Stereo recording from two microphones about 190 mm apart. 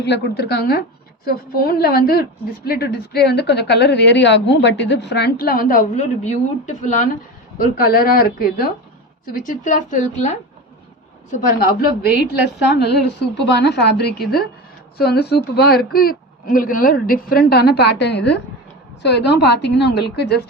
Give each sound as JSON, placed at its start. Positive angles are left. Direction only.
{"t": 0.0, "sound": "a woman's voice", "side_deg": 60}
{"t": 12.6, "sound": "a woman's voice", "side_deg": 65}